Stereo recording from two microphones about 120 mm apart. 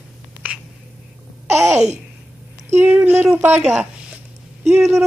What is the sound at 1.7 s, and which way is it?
Babbling, 70° right (ahead or behind).